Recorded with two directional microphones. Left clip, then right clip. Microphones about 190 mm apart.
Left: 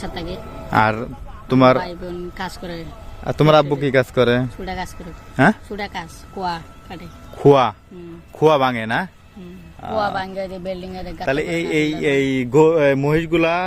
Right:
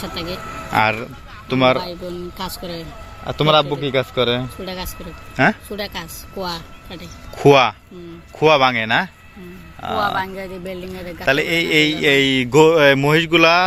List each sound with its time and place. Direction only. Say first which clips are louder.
0.7 s speech: even; 30° left (ahead or behind)
1.5 s speech: left 2 dB; 40° left (ahead or behind)
1.8 s speech: even; centre (ahead or behind)
3.2 s speech: left 1 dB; 45° left (ahead or behind)
5.4 s speech: even; 25° left (ahead or behind)
6.4 s speech: left 2 dB; 5° left (ahead or behind)
10.0 s speech: right 1 dB; 50° left (ahead or behind)
11.3 s speech: right 4 dB; 5° left (ahead or behind)